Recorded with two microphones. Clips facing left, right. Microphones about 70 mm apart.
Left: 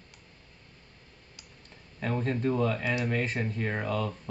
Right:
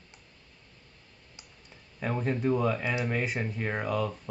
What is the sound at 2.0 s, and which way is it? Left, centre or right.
Speech, centre.